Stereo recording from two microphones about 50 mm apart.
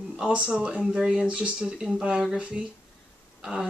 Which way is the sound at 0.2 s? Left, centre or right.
Centre.